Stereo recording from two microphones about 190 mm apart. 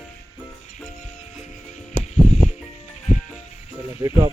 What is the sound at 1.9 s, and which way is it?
Music, 40° left (ahead or behind).